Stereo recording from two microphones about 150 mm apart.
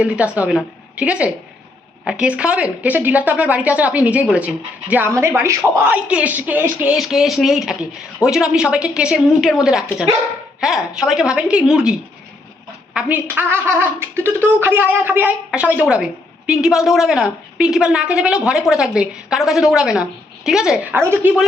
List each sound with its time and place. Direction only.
0.0 s a woman's voice: 10° right (ahead or behind)
21.0 s speech: 15° right (ahead or behind)